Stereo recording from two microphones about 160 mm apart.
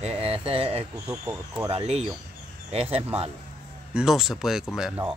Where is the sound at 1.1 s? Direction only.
20° right (ahead or behind).